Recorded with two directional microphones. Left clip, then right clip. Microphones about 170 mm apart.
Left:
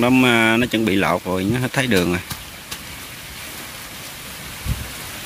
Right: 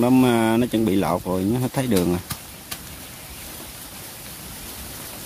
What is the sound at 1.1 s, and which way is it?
Speech, centre (ahead or behind).